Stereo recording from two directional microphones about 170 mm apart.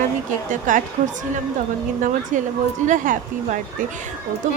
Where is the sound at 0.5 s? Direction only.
50° right (ahead or behind).